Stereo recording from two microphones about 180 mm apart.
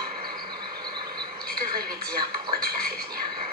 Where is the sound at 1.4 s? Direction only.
55° right (ahead or behind).